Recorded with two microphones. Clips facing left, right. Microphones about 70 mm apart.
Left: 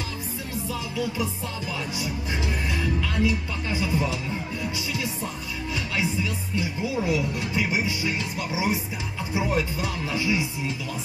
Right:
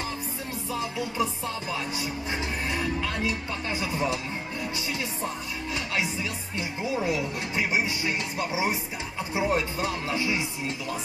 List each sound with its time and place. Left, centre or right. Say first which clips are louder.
0.7 s music: left 1 dB; right
2.7 s speech: even; right
6.1 s speech: left 4 dB; right